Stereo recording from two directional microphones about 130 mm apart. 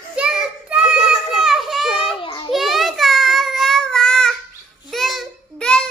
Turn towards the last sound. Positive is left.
turn(degrees=5)  # may be behind; listen again after turning